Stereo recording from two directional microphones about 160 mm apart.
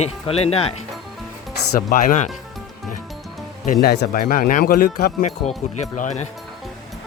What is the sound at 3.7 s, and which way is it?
Speech, 85° left.